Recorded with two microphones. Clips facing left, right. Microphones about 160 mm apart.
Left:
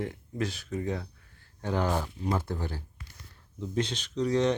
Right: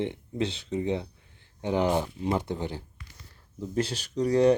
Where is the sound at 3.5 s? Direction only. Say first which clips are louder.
Right 2 dB; 5° right (ahead or behind).